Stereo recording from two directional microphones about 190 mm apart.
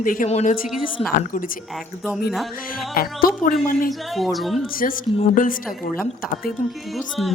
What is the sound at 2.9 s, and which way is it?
Speech, 50° left (ahead or behind).